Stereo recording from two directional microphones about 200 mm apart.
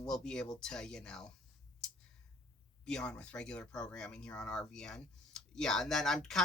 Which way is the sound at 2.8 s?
5° left (ahead or behind).